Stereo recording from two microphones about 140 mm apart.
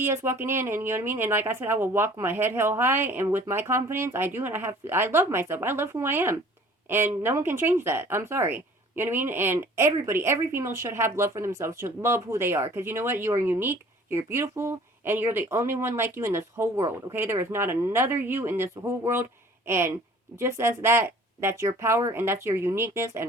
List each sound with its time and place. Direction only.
0.0 s a woman's voice: 20° right (ahead or behind)